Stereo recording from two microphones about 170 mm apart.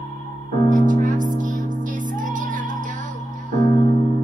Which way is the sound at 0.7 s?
50° right (ahead or behind).